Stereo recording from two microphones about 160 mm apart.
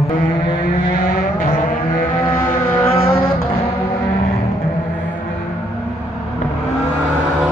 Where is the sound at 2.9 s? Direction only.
35° left (ahead or behind).